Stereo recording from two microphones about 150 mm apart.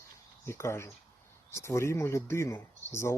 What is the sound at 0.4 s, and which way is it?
Speech, 20° left (ahead or behind).